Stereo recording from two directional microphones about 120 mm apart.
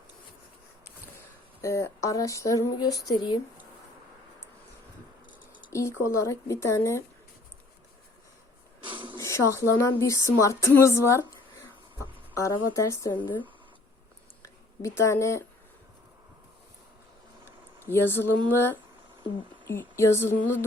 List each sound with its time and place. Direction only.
1.6 s speech: 25° left (ahead or behind)
5.7 s speech: 25° left (ahead or behind)
8.8 s a sound: 45° right (ahead or behind)
9.1 s speech: 25° left (ahead or behind)
12.4 s speech: 25° left (ahead or behind)
14.4 s speech: 25° left (ahead or behind)
17.9 s speech: 20° left (ahead or behind)